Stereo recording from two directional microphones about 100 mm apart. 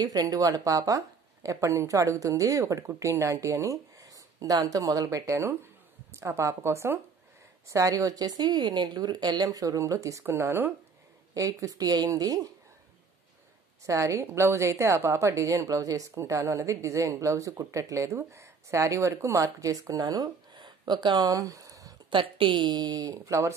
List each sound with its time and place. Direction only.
0.0 s a woman's voice: 40° right (ahead or behind)
13.8 s a woman's voice: 30° right (ahead or behind)
22.1 s speech: 60° right (ahead or behind); by 23.5 s 35° right (ahead or behind)